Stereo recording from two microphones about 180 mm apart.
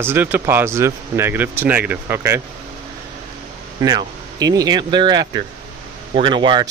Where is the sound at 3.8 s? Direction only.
20° right (ahead or behind).